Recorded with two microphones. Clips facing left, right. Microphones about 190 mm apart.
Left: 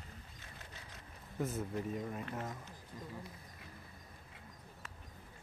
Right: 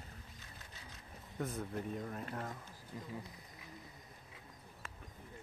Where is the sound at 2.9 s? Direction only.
20° right (ahead or behind).